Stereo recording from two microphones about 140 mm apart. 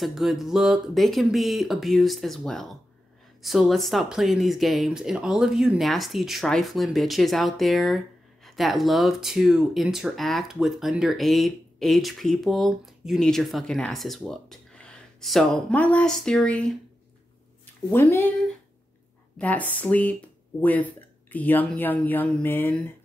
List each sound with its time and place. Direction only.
0.0 s speech: centre (ahead or behind)
17.9 s speech: 15° left (ahead or behind)
19.3 s speech: 10° left (ahead or behind)